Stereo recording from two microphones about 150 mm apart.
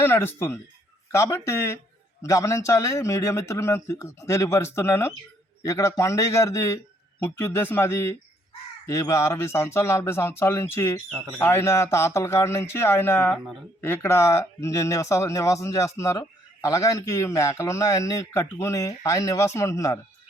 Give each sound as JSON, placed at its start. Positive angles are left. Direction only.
{"t": 0.0, "sound": "a man's voice", "side_deg": 15}
{"t": 13.3, "sound": "speech", "side_deg": 0}
{"t": 13.8, "sound": "speech", "side_deg": 15}